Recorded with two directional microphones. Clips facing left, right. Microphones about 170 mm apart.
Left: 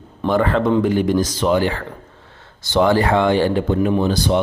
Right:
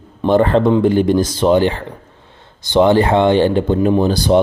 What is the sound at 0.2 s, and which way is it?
Speech, 30° right (ahead or behind).